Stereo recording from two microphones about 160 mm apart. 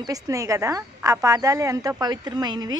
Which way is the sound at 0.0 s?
20° right (ahead or behind).